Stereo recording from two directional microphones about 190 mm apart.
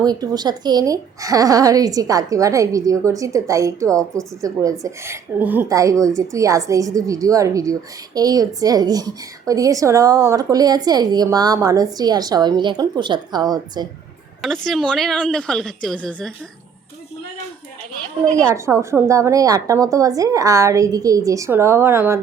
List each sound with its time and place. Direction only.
0.0 s a woman's voice: 20° right (ahead or behind)
14.4 s a woman's voice: centre (ahead or behind)
18.3 s a woman's voice: 15° right (ahead or behind)